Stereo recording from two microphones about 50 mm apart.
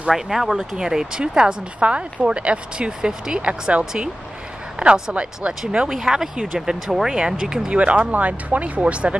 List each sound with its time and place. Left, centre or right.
0.1 s speech: centre; by 9.1 s right